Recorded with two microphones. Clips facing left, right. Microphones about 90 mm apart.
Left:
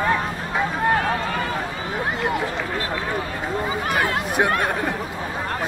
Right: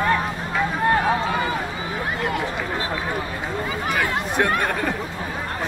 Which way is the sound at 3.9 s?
10° left (ahead or behind).